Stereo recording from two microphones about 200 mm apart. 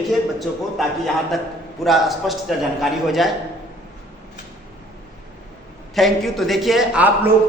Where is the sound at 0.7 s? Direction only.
Centre (ahead or behind).